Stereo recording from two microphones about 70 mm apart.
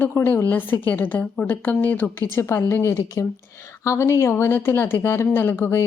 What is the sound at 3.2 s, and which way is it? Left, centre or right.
Speech, left.